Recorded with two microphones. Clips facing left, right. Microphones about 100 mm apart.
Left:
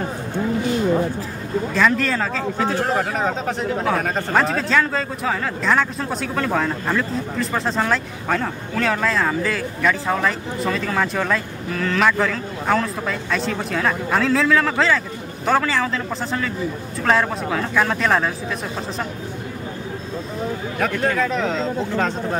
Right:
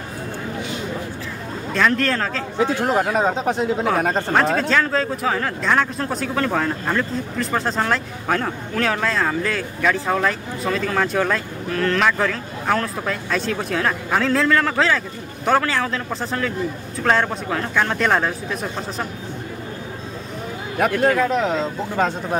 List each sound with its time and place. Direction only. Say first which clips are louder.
1.7 s speech: right 1 dB; centre (ahead or behind)
2.6 s speech: right 3 dB; 25° right (ahead or behind)
4.3 s speech: left 1 dB; centre (ahead or behind)
20.9 s speech: right 4 dB; 5° right (ahead or behind)